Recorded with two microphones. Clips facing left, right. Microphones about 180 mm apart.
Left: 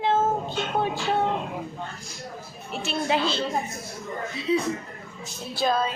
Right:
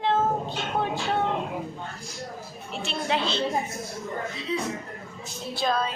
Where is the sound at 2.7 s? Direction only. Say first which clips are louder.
Left 2 dB; 5° left (ahead or behind).